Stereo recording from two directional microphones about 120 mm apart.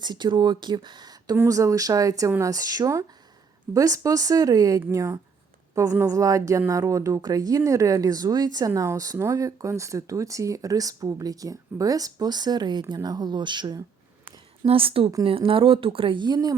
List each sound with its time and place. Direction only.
0.0 s speech: 40° right (ahead or behind)
14.6 s speech: 50° right (ahead or behind); by 16.6 s 35° right (ahead or behind)